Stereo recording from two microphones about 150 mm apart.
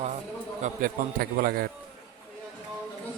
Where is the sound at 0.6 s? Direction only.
70° right (ahead or behind).